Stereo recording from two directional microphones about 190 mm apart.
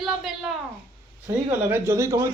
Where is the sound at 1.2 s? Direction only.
15° right (ahead or behind).